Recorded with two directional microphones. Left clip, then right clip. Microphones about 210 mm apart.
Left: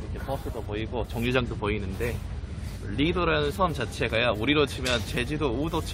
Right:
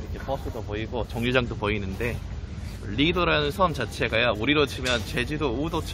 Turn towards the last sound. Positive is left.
turn(degrees=0)  # may be behind; listen again after turning